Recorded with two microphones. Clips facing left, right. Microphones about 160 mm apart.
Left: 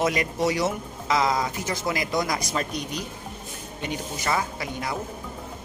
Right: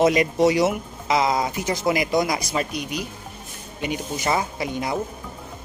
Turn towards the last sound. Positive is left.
turn(degrees=-20)  # may be behind; listen again after turning